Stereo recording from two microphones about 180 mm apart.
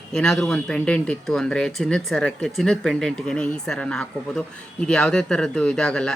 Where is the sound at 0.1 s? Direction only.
5° left (ahead or behind).